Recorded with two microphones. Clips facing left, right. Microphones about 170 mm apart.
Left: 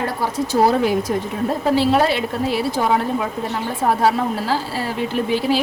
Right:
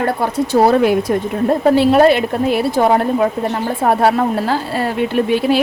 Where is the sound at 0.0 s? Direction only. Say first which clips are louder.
Right 5 dB; 60° right (ahead or behind).